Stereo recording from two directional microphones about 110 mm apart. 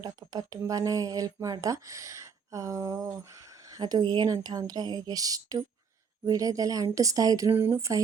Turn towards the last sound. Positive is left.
turn(degrees=-20)  # may be behind; listen again after turning